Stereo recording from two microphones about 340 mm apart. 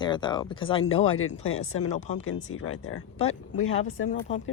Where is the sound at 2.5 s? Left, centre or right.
Left.